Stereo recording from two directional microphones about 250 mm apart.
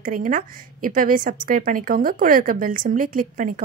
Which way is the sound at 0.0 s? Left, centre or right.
Right.